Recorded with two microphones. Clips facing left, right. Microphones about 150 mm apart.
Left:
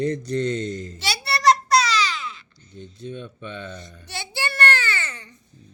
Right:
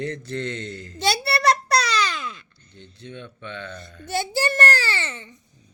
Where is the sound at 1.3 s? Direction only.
60° right (ahead or behind).